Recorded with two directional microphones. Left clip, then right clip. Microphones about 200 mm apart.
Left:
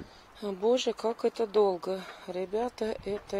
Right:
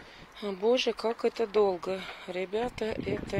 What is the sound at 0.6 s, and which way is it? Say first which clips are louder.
Speech: right 1 dB; 25° right (ahead or behind).